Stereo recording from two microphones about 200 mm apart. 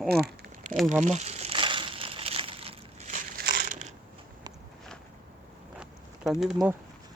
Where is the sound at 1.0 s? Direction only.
35° right (ahead or behind).